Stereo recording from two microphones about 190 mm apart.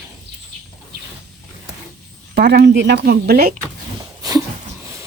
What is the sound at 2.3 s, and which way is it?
Speech, 60° right (ahead or behind).